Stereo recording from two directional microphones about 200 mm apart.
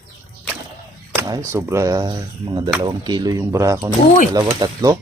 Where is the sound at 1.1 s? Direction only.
15° right (ahead or behind).